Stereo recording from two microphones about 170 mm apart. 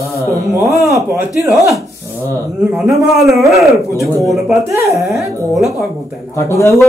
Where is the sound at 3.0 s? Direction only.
Centre (ahead or behind).